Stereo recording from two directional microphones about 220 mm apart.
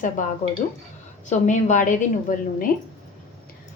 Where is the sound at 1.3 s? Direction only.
35° left (ahead or behind).